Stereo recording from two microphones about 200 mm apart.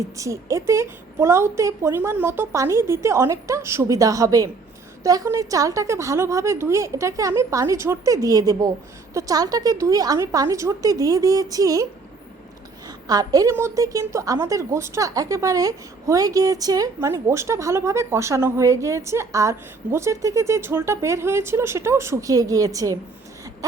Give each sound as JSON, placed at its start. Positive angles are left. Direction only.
{"t": 0.2, "sound": "a woman's voice", "side_deg": -15}
{"t": 13.1, "sound": "a woman's voice", "side_deg": -20}